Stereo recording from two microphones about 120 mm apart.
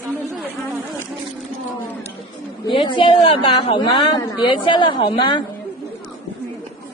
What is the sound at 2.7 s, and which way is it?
A woman's voice, 45° left (ahead or behind).